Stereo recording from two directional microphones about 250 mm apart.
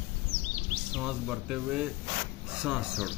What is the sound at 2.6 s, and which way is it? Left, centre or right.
Speech, centre.